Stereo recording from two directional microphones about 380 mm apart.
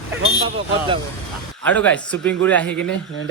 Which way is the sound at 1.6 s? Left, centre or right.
Centre.